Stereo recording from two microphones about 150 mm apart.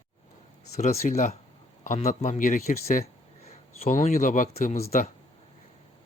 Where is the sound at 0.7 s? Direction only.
50° left (ahead or behind); by 5.1 s 70° left (ahead or behind).